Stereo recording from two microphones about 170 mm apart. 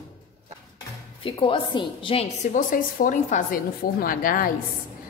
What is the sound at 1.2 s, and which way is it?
A woman's voice, 30° left (ahead or behind).